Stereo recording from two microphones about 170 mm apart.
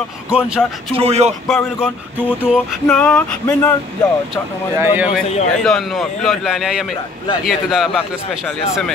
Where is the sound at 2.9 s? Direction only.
5° left (ahead or behind).